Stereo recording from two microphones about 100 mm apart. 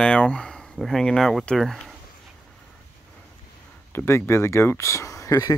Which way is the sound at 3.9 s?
25° left (ahead or behind).